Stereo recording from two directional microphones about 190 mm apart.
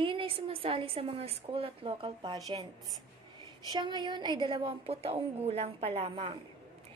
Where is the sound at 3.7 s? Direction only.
25° right (ahead or behind).